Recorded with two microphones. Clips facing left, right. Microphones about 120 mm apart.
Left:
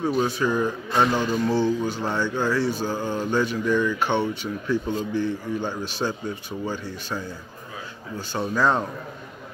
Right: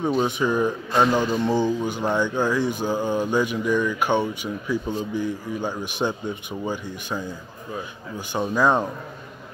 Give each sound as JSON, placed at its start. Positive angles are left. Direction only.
{"t": 0.2, "sound": "speech", "side_deg": -20}